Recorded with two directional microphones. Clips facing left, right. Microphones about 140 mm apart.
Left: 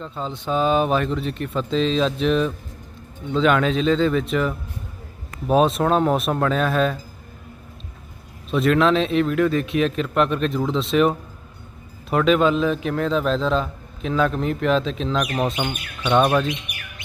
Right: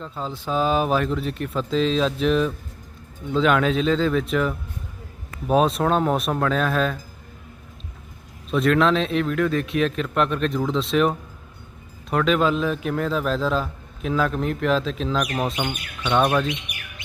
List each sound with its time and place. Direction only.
0.0 s a man's voice: 5° right (ahead or behind)
8.4 s a man's voice: centre (ahead or behind)